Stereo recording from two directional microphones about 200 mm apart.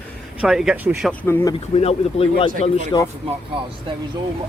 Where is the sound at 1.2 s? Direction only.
10° left (ahead or behind).